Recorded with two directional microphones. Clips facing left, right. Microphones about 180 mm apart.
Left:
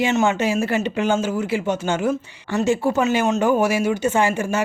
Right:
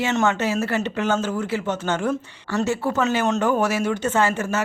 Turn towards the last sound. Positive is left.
turn(degrees=15)  # may be behind; listen again after turning